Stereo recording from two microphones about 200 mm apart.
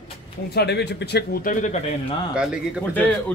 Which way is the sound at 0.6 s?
55° left (ahead or behind).